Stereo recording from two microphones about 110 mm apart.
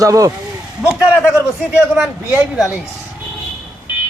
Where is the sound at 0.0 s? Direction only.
30° right (ahead or behind).